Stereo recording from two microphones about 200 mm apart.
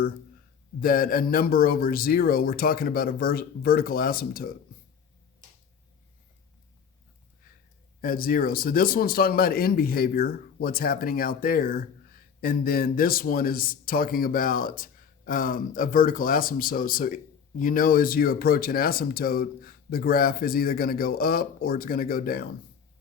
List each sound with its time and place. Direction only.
0.8 s speech: 45° left (ahead or behind)
8.0 s speech: 45° left (ahead or behind)